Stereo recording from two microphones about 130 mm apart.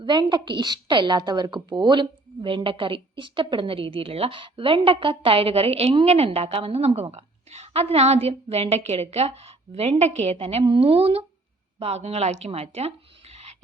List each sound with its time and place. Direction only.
0.0 s a woman's voice: 35° right (ahead or behind); by 13.6 s 50° right (ahead or behind)